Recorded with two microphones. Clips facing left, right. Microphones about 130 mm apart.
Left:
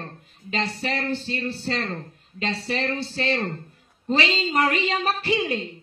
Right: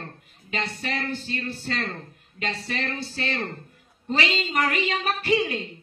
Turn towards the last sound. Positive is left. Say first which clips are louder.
# right 1 dB
turn(degrees=30)  # may be behind; listen again after turning